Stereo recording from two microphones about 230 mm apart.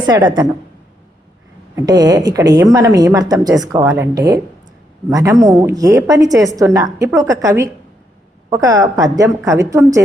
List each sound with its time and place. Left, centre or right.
0.0 s a woman's voice: centre
1.7 s a woman's voice: centre